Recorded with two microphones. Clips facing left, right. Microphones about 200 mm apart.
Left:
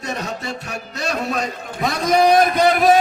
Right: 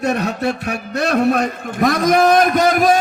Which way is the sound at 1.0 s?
60° right (ahead or behind).